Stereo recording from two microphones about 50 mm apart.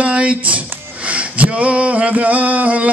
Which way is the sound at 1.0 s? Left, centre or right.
Right.